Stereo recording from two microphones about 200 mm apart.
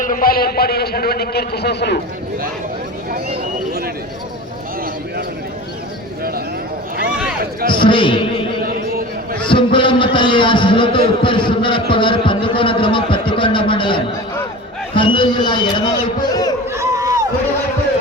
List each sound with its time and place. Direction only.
0.0 s a man's voice: 45° left (ahead or behind)
7.7 s a man's voice: 25° left (ahead or behind)
9.5 s a man's voice: 25° left (ahead or behind)
16.7 s a sound: 15° right (ahead or behind)